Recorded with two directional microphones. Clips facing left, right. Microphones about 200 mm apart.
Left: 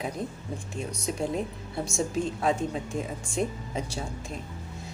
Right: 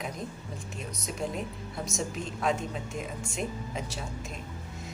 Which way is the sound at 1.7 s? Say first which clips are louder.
Left 6 dB; 30° left (ahead or behind).